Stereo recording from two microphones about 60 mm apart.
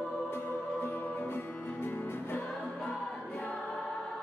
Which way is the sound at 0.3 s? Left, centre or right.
Left.